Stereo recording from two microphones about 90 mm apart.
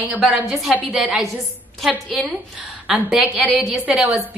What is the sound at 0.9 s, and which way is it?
Speech, 15° right (ahead or behind).